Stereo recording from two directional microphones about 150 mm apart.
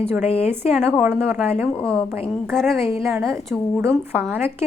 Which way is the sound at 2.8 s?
20° right (ahead or behind).